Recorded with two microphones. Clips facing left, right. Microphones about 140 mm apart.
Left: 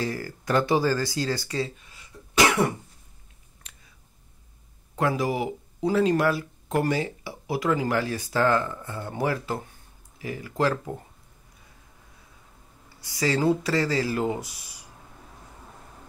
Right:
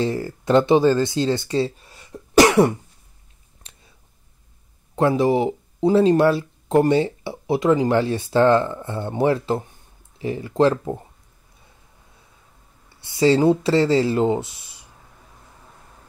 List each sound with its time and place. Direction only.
0.0 s speech: 25° right (ahead or behind)
3.6 s a sound: 30° right (ahead or behind)
4.9 s speech: 25° right (ahead or behind)
12.9 s speech: 25° right (ahead or behind)